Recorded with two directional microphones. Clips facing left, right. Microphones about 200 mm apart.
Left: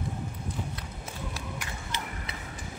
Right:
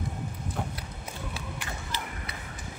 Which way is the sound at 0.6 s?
60° right (ahead or behind).